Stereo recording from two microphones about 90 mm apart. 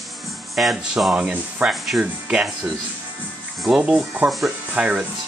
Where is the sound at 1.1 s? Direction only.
15° right (ahead or behind).